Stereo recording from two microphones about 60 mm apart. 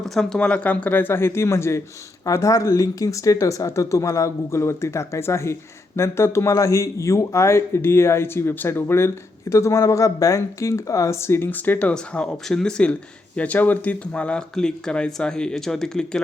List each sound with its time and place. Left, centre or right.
0.0 s speech: centre
0.3 s speech: left
2.2 s speech: left
11.5 s speech: left
14.3 s speech: centre